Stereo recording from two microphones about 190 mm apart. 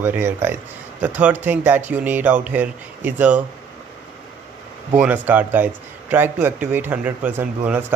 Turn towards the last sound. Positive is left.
turn(degrees=-10)  # may be behind; listen again after turning